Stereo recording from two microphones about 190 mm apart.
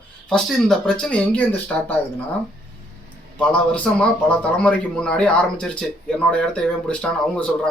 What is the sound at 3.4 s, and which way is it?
Speech, 5° left (ahead or behind).